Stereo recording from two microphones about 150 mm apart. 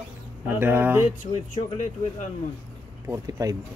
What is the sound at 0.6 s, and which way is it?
Speech, 15° right (ahead or behind).